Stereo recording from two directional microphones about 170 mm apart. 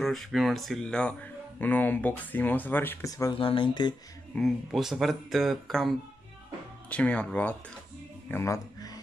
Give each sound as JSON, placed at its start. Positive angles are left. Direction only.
{"t": 0.0, "sound": "speech", "side_deg": 0}
{"t": 4.4, "sound": "speech", "side_deg": 0}
{"t": 8.3, "sound": "music", "side_deg": 15}